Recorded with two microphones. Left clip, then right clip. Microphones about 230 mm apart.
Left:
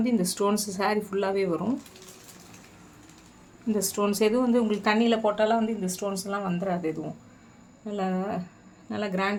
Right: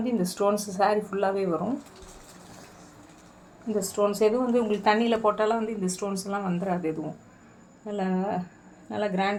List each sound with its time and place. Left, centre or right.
0.0 s speech: left
3.9 s speech: left